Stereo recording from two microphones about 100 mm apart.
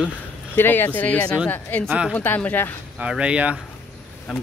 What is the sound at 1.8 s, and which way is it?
Speech, 10° right (ahead or behind).